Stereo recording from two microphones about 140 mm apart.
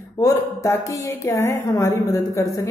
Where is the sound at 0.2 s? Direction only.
25° left (ahead or behind).